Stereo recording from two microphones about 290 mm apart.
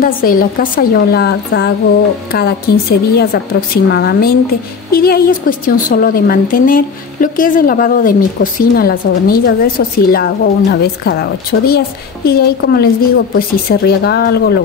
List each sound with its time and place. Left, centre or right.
0.0 s a woman's voice: left